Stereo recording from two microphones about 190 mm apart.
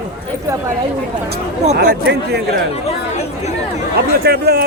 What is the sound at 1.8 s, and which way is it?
Speech, 60° right (ahead or behind).